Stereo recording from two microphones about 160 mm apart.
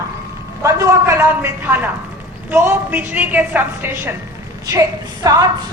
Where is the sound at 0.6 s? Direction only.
20° right (ahead or behind).